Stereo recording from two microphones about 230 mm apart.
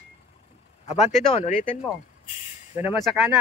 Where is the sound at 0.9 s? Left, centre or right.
Left.